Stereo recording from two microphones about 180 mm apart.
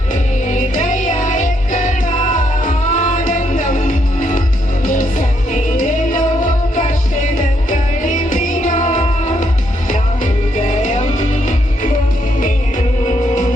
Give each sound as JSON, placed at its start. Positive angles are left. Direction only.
{"t": 0.5, "sound": "music", "side_deg": 45}
{"t": 7.7, "sound": "music", "side_deg": 45}